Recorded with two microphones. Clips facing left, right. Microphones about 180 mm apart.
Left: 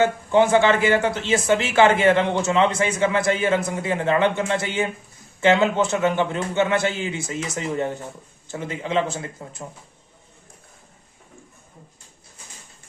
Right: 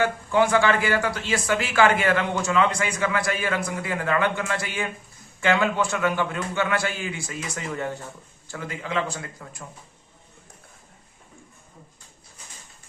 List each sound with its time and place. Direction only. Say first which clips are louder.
0.0 s speech: left 4 dB; 20° left (ahead or behind)